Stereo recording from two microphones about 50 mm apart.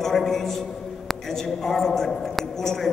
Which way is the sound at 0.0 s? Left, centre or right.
Centre.